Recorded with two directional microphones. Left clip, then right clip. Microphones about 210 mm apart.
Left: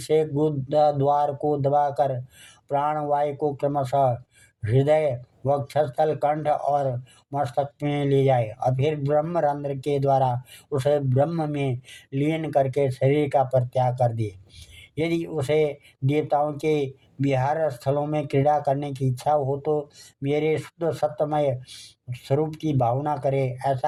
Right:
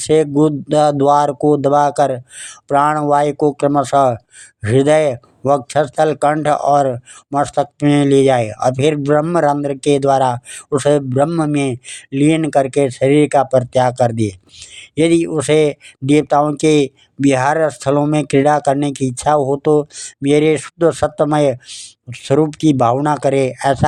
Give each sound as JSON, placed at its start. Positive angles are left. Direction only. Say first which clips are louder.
{"t": 0.0, "sound": "speech", "louder": "right 9 dB", "side_deg": -35}